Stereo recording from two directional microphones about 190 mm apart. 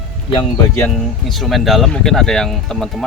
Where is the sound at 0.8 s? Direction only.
Centre (ahead or behind).